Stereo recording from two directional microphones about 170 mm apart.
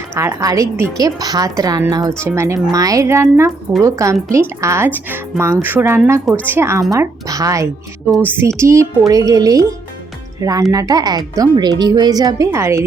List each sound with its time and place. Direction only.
0.1 s a woman's voice: 15° right (ahead or behind)